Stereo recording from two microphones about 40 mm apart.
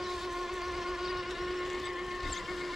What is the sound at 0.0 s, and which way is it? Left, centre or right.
Steam whistle, centre.